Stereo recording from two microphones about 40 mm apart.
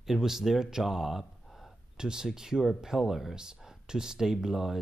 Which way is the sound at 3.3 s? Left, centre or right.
Centre.